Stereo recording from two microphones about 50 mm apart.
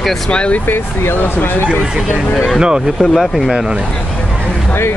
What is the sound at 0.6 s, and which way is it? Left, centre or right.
Speech, left.